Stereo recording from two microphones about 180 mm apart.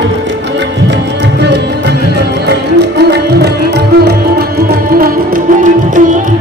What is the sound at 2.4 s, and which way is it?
Music, 65° right (ahead or behind).